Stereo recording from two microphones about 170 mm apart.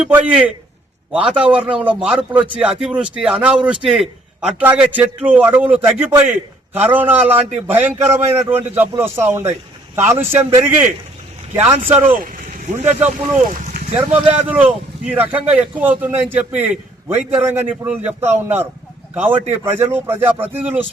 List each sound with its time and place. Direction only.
0.0 s a man's voice: 5° right (ahead or behind)
11.9 s a man's voice: 10° right (ahead or behind)
13.1 s speech: 45° right (ahead or behind)
13.9 s a man's voice: 5° right (ahead or behind)